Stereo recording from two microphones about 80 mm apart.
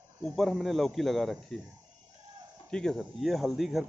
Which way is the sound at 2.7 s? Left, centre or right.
Centre.